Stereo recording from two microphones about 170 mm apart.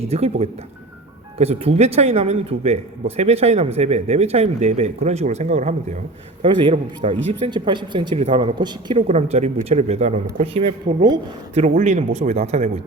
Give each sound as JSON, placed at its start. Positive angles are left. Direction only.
{"t": 0.0, "sound": "speech", "side_deg": -35}
{"t": 6.4, "sound": "speech", "side_deg": -30}
{"t": 9.0, "sound": "speech", "side_deg": -40}
{"t": 11.5, "sound": "speech", "side_deg": -45}